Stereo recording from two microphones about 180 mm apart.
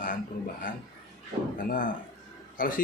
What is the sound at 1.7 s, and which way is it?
A man's voice, 50° left (ahead or behind).